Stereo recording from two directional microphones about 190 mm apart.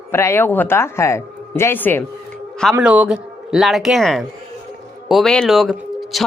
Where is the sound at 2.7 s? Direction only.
5° right (ahead or behind).